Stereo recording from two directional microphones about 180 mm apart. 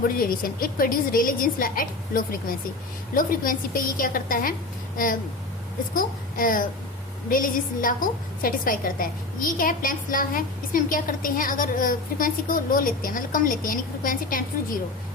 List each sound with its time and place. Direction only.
0.1 s a woman's voice: 50° left (ahead or behind)
5.9 s a woman's voice: 50° left (ahead or behind)